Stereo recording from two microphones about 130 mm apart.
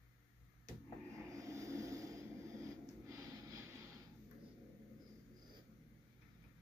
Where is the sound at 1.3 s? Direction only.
25° right (ahead or behind).